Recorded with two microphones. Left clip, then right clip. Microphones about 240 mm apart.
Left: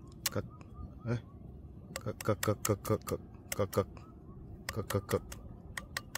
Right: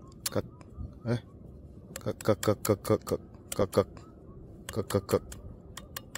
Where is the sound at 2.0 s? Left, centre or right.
Centre.